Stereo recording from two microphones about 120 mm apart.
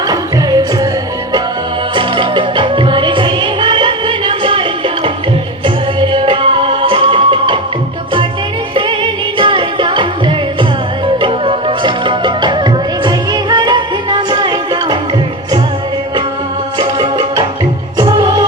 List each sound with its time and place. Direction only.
0.1 s music: 35° right (ahead or behind)
2.0 s music: 45° right (ahead or behind)
5.6 s music: 45° right (ahead or behind)
8.7 s music: 45° right (ahead or behind)
16.7 s music: 35° right (ahead or behind)